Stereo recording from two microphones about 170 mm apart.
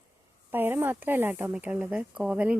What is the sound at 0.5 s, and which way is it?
A woman's voice, 10° right (ahead or behind).